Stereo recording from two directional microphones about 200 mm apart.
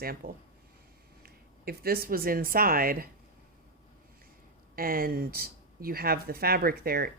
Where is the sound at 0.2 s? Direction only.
45° right (ahead or behind).